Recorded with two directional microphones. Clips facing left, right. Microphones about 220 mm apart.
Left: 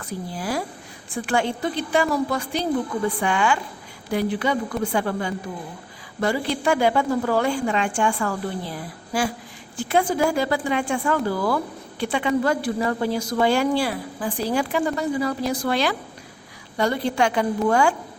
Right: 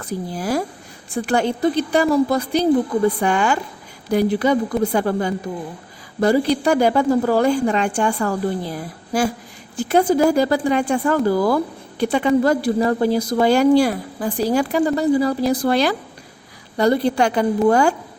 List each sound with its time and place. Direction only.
0.0 s speech: 40° right (ahead or behind)